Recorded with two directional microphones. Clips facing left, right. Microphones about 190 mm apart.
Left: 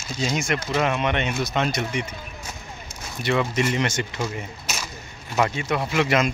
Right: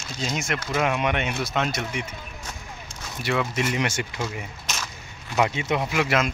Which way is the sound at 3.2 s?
5° right (ahead or behind).